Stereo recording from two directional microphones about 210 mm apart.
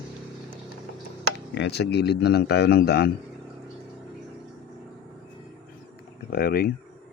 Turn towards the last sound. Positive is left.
turn(degrees=45)  # may be behind; listen again after turning